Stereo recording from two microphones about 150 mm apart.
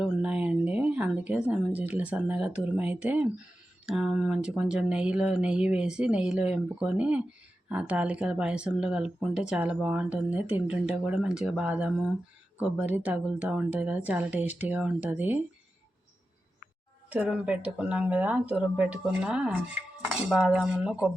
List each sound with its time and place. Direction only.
0.0 s speech: 5° right (ahead or behind)
17.1 s speech: 10° right (ahead or behind)